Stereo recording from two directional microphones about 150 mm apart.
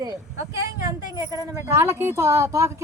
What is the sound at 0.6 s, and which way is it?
Speech, 20° right (ahead or behind).